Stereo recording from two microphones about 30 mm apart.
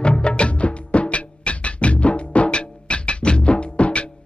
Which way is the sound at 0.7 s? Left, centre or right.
Left.